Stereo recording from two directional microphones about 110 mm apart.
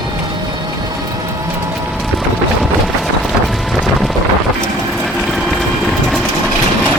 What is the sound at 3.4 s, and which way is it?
Wind noise, centre (ahead or behind).